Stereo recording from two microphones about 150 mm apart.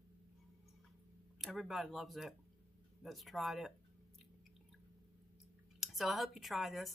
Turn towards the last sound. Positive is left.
turn(degrees=0)  # may be behind; listen again after turning